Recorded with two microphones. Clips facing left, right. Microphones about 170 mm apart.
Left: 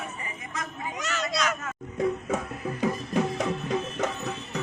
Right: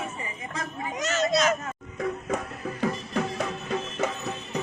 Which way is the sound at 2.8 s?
15° left (ahead or behind).